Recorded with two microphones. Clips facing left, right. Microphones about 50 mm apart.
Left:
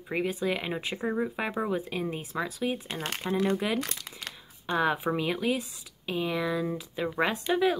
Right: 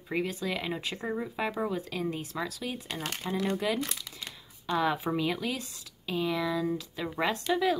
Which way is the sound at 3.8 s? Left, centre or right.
Left.